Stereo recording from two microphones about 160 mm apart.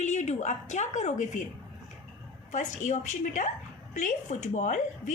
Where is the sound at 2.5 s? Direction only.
50° left (ahead or behind).